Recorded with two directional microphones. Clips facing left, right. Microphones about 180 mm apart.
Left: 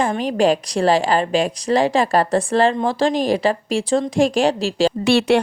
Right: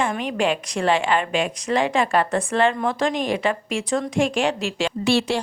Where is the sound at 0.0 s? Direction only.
35° left (ahead or behind).